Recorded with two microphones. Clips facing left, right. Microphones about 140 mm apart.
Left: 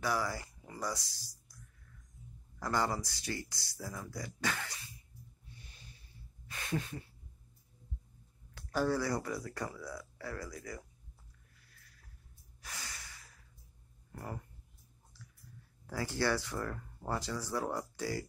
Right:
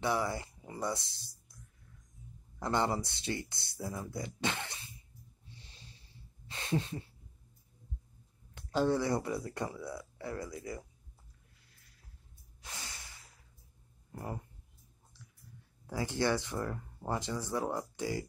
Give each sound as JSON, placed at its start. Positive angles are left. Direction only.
{"t": 0.0, "sound": "a sound", "side_deg": -25}
{"t": 2.6, "sound": "speech", "side_deg": -25}
{"t": 5.5, "sound": "a sound", "side_deg": -25}
{"t": 8.5, "sound": "speech", "side_deg": -20}
{"t": 12.6, "sound": "snort", "side_deg": -25}
{"t": 14.1, "sound": "speech", "side_deg": -20}
{"t": 15.9, "sound": "speech", "side_deg": -20}